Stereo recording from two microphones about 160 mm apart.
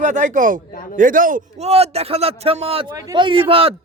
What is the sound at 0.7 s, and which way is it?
Speech, 60° left (ahead or behind).